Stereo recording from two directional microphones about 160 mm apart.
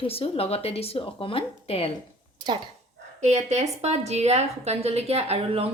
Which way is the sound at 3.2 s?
45° right (ahead or behind).